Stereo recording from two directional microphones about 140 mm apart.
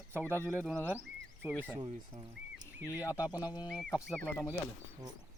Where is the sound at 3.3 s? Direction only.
25° left (ahead or behind).